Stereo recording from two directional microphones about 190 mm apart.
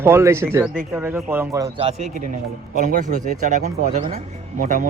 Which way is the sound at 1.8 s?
35° right (ahead or behind).